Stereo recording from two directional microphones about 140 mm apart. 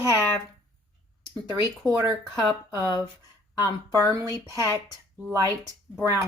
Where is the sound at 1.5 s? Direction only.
20° right (ahead or behind).